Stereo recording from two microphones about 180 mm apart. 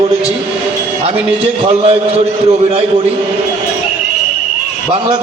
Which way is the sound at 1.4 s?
35° right (ahead or behind).